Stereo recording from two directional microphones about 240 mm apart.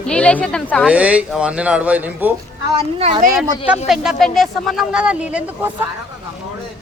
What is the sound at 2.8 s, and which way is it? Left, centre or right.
Speech, right.